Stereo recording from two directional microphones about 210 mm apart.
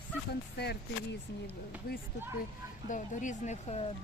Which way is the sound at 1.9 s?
45° left (ahead or behind).